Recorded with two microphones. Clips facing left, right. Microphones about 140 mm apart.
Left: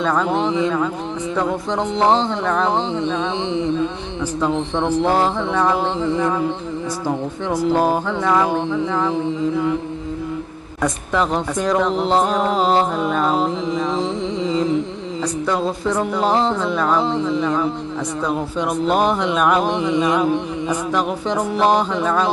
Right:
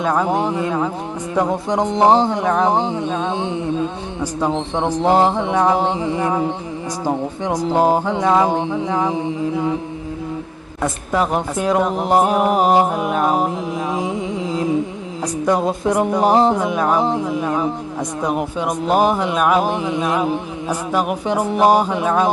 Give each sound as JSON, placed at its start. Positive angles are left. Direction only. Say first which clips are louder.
{"t": 0.0, "sound": "speech", "louder": "right 1 dB", "side_deg": -10}
{"t": 10.8, "sound": "speech", "louder": "even", "side_deg": -10}
{"t": 18.9, "sound": "mantra", "louder": "right 3 dB", "side_deg": -10}
{"t": 20.2, "sound": "speech", "louder": "left 2 dB", "side_deg": -10}